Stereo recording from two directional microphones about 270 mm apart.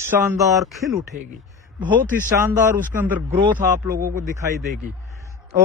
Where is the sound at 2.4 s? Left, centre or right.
Centre.